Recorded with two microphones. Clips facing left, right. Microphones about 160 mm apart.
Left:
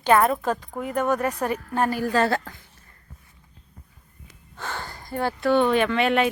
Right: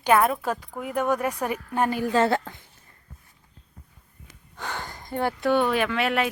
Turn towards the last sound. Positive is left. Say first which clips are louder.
# left 3 dB
turn(degrees=-5)  # may be behind; listen again after turning